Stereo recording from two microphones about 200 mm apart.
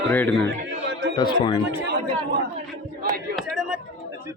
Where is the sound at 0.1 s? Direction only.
10° left (ahead or behind).